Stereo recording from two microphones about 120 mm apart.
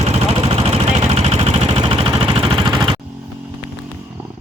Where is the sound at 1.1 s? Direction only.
45° right (ahead or behind).